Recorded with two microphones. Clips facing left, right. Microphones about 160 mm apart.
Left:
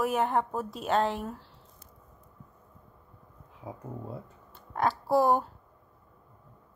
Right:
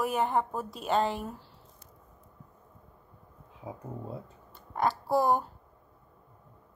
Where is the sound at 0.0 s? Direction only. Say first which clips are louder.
Left 1 dB; centre (ahead or behind).